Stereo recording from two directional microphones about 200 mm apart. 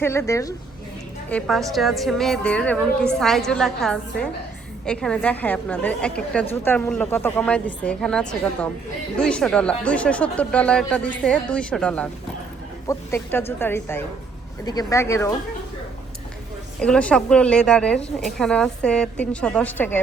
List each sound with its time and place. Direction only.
0.0 s speech: 15° left (ahead or behind)
1.3 s speech: 5° left (ahead or behind)
16.8 s speech: 5° left (ahead or behind)